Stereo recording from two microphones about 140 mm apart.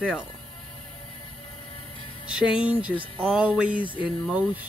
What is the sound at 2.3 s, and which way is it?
Speech, 5° right (ahead or behind).